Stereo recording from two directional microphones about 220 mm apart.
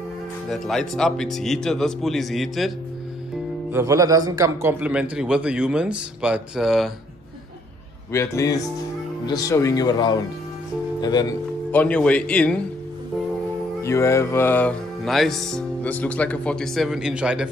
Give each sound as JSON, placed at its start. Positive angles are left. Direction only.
{"t": 0.5, "sound": "music", "side_deg": 0}
{"t": 3.7, "sound": "music", "side_deg": -15}
{"t": 8.1, "sound": "speech", "side_deg": 15}
{"t": 11.7, "sound": "music", "side_deg": 5}
{"t": 13.8, "sound": "music", "side_deg": 15}